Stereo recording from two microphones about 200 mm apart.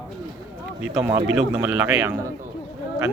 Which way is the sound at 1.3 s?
10° right (ahead or behind).